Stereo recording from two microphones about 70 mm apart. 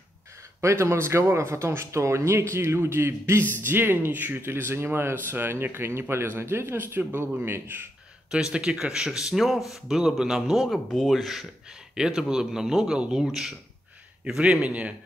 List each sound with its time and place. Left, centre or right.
0.6 s speech: right
8.3 s speech: centre